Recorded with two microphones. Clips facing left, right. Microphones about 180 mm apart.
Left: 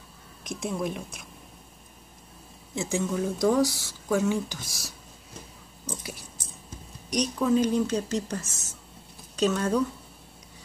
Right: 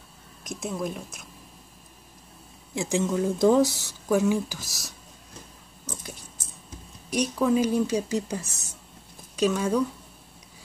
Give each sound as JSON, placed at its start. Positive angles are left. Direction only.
{"t": 0.4, "sound": "a woman's voice", "side_deg": 0}
{"t": 2.7, "sound": "speech", "side_deg": -15}
{"t": 7.1, "sound": "speech", "side_deg": -5}